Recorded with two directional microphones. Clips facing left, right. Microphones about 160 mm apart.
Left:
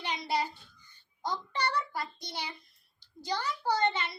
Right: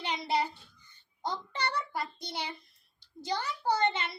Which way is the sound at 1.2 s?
25° right (ahead or behind).